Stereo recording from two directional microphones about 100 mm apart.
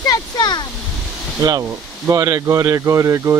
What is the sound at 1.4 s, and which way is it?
Speech, 35° right (ahead or behind).